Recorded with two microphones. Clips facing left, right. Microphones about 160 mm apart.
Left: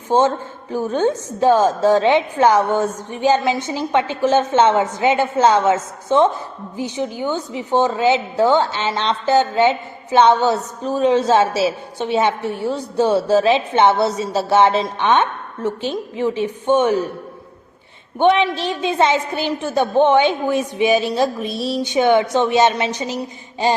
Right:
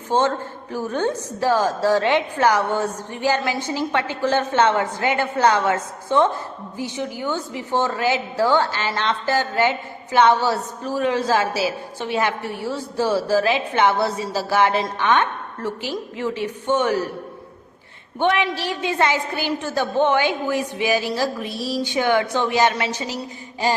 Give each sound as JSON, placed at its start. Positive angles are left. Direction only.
{"t": 0.1, "sound": "a man's voice", "side_deg": 15}
{"t": 18.2, "sound": "a woman's voice", "side_deg": 20}